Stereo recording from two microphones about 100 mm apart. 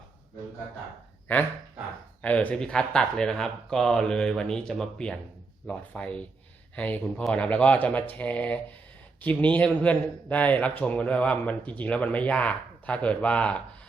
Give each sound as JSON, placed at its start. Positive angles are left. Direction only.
{"t": 1.3, "sound": "a man's voice", "side_deg": 20}